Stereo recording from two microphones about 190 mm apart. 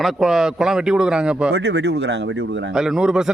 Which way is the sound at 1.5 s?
65° right (ahead or behind).